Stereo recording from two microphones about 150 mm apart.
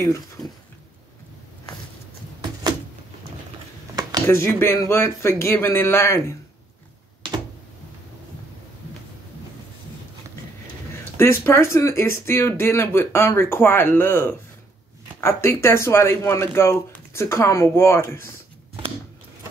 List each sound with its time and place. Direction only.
0.0 s speech: 20° left (ahead or behind)
4.3 s speech: 15° left (ahead or behind)
11.1 s speech: 15° left (ahead or behind)